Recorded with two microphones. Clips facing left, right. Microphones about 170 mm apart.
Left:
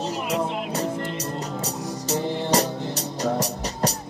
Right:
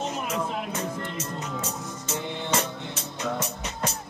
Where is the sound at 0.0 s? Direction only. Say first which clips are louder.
Left 4 dB; 35° left (ahead or behind).